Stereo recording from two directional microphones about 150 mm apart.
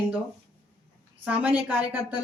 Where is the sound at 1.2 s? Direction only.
10° right (ahead or behind).